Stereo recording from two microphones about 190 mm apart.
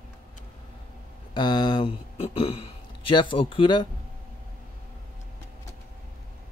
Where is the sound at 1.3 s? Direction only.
25° left (ahead or behind).